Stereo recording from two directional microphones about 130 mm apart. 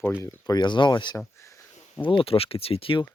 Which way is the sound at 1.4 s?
20° left (ahead or behind).